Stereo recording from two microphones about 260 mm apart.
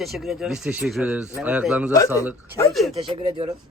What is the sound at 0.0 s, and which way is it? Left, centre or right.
A man's voice, centre.